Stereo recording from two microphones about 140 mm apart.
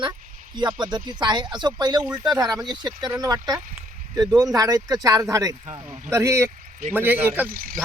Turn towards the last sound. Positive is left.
turn(degrees=-80)